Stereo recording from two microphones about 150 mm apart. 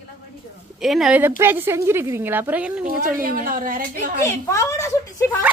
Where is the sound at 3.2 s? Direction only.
70° right (ahead or behind).